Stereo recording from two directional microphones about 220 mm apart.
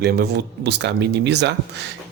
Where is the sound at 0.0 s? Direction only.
45° right (ahead or behind).